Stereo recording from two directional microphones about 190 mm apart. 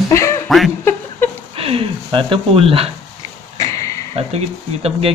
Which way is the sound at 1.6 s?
30° right (ahead or behind).